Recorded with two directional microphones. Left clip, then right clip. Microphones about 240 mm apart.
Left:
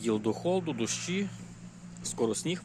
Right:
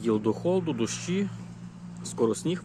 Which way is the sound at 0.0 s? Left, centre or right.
Centre.